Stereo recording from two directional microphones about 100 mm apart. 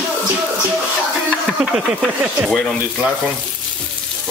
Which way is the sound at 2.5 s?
5° left (ahead or behind).